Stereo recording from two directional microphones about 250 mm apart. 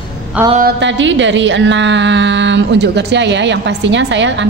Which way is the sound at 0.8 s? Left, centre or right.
Right.